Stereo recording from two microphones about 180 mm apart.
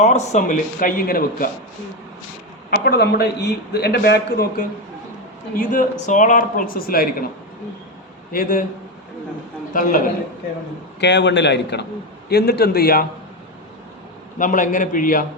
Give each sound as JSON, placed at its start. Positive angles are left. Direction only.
{"t": 0.0, "sound": "speech", "side_deg": 40}
{"t": 2.6, "sound": "a man's voice", "side_deg": 60}
{"t": 5.5, "sound": "speech", "side_deg": 45}
{"t": 8.3, "sound": "speech", "side_deg": 55}
{"t": 9.7, "sound": "speech", "side_deg": 50}
{"t": 11.0, "sound": "a man's voice", "side_deg": 75}
{"t": 14.3, "sound": "speech", "side_deg": 45}